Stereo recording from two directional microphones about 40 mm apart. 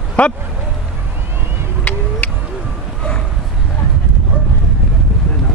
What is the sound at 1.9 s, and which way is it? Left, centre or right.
Vehicle, left.